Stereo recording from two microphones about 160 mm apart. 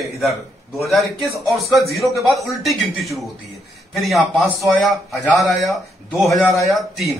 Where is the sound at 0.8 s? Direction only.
Centre (ahead or behind).